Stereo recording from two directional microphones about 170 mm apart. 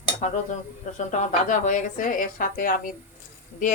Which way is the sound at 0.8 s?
45° left (ahead or behind).